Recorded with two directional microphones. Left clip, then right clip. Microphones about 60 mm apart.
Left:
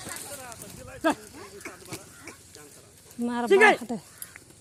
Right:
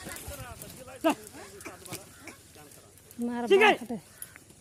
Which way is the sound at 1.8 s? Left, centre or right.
Right.